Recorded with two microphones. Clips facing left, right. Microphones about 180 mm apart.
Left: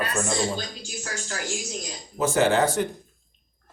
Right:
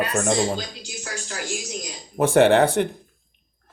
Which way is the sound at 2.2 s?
60° right (ahead or behind).